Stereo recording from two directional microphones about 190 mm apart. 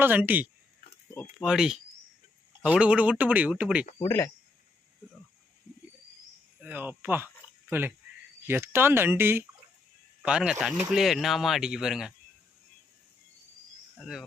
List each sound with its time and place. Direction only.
0.0 s speech: 10° right (ahead or behind)
3.8 s speech: 30° left (ahead or behind)
6.6 s speech: 10° right (ahead or behind)
14.0 s speech: centre (ahead or behind)